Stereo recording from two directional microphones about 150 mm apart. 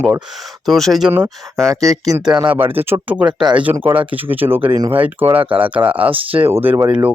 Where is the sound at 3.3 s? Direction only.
30° right (ahead or behind).